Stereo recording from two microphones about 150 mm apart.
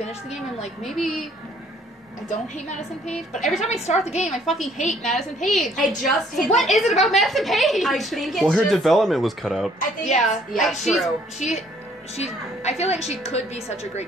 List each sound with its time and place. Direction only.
0.0 s a woman's voice: 45° left (ahead or behind)
0.8 s a woman's voice: centre (ahead or behind)
2.2 s a woman's voice: 50° left (ahead or behind)
4.5 s a woman's voice: centre (ahead or behind)
9.8 s a woman's voice: 50° left (ahead or behind)
10.8 s a woman's voice: centre (ahead or behind)
11.3 s a woman's voice: 50° left (ahead or behind)